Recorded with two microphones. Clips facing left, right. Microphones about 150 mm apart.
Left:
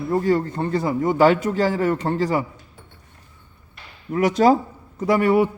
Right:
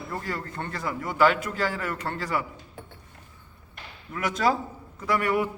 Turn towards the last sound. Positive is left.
turn(degrees=30)  # may be behind; listen again after turning